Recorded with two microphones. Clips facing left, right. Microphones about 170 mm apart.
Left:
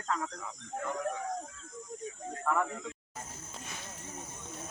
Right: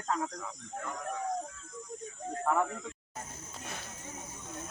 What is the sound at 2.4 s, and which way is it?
Speech, 20° right (ahead or behind).